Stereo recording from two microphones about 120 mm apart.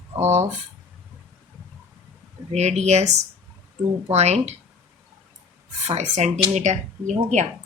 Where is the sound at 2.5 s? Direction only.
70° right (ahead or behind).